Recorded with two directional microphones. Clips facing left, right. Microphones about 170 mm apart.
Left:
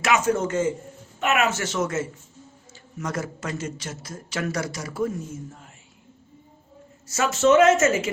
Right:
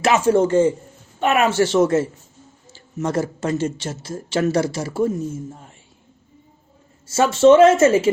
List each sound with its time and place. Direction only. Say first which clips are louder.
0.0 s a man's voice: right 6 dB; 30° right (ahead or behind)
7.1 s speech: right 6 dB; 30° right (ahead or behind)